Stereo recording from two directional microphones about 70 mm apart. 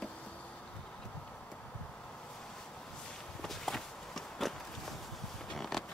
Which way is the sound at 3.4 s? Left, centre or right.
Centre.